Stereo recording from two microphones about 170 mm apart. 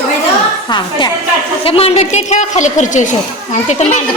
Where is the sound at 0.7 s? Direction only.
25° left (ahead or behind); by 4.0 s 45° left (ahead or behind).